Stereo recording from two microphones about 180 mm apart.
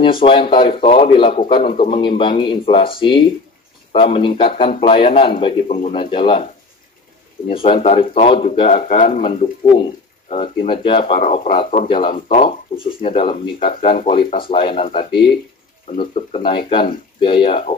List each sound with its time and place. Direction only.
0.2 s a man's voice: 30° left (ahead or behind); by 11.9 s 45° left (ahead or behind)
12.3 s a man's voice: 30° left (ahead or behind)
14.2 s speech: 55° left (ahead or behind)
14.5 s a man's voice: 30° left (ahead or behind)